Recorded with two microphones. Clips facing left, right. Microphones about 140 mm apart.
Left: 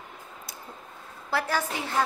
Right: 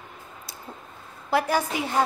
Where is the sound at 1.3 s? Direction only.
15° right (ahead or behind).